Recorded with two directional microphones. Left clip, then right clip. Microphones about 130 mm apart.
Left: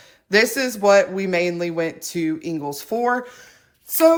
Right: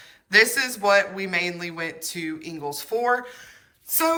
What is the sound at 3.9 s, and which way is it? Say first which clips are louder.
Speech: left 8 dB; 35° left (ahead or behind).